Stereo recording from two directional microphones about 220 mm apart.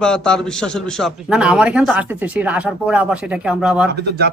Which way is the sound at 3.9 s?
45° right (ahead or behind).